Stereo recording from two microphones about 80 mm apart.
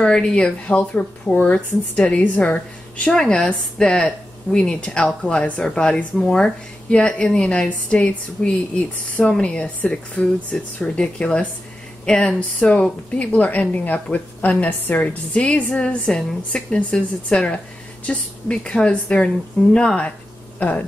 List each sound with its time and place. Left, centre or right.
0.0 s speech: centre